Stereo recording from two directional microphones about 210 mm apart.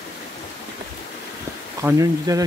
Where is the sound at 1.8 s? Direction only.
15° right (ahead or behind).